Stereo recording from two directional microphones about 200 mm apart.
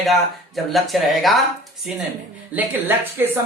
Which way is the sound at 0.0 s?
Centre (ahead or behind).